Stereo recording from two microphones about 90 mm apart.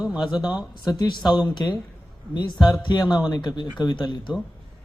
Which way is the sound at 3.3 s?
55° left (ahead or behind).